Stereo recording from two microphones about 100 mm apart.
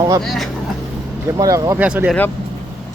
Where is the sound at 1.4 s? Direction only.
35° right (ahead or behind).